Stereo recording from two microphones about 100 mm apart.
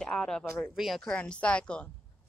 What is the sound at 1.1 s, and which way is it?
Speech, 10° left (ahead or behind).